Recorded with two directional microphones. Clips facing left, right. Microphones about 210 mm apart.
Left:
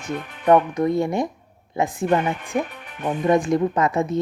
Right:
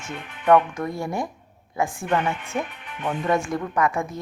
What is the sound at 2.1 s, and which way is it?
Speech, 40° left (ahead or behind).